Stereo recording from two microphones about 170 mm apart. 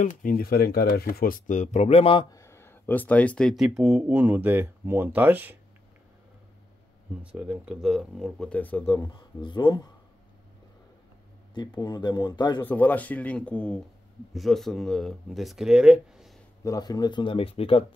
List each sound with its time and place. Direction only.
0.0 s speech: 50° left (ahead or behind); by 2.2 s 35° left (ahead or behind)
2.3 s speech: 15° left (ahead or behind); by 5.6 s 10° right (ahead or behind)
7.3 s speech: 5° right (ahead or behind); by 8.8 s 10° left (ahead or behind)
8.8 s speech: 25° left (ahead or behind)
11.5 s speech: 25° left (ahead or behind)
12.6 s speech: 10° left (ahead or behind)
16.6 s speech: 20° left (ahead or behind)